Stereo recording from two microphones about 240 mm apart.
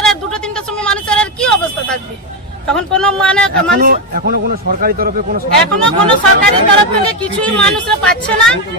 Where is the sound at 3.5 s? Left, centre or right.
Right.